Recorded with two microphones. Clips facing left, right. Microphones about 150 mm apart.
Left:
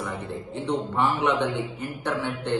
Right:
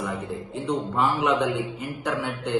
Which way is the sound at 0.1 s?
10° right (ahead or behind).